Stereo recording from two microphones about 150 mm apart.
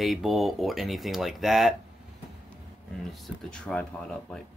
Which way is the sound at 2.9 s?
Centre (ahead or behind).